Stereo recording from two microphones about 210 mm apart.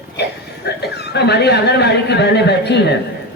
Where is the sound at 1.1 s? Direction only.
55° left (ahead or behind).